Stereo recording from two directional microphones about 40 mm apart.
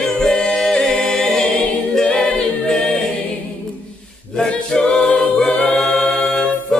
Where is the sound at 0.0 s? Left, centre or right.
Centre.